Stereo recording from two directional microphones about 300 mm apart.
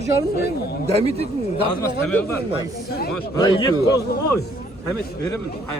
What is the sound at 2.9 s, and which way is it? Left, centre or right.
Speech, left.